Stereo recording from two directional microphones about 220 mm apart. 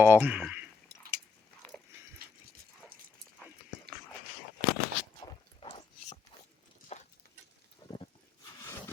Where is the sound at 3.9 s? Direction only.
45° right (ahead or behind).